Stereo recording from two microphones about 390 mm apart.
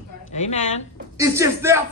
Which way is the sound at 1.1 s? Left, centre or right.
Centre.